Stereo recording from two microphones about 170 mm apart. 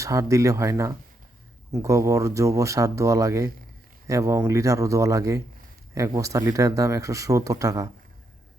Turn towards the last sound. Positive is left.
turn(degrees=-20)  # may be behind; listen again after turning